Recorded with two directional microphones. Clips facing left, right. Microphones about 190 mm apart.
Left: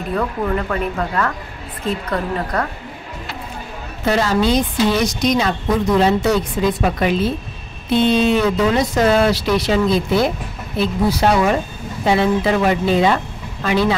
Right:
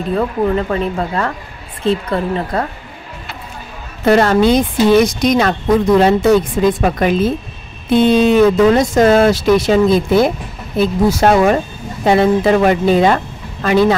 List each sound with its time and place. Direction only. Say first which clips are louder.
0.1 s speech: right 5 dB; 25° right (ahead or behind)
4.0 s speech: right 6 dB; 60° right (ahead or behind)